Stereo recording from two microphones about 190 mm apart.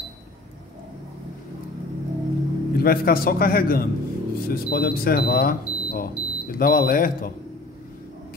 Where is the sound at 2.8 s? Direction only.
50° left (ahead or behind).